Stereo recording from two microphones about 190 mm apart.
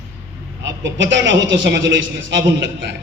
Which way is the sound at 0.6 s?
70° right (ahead or behind).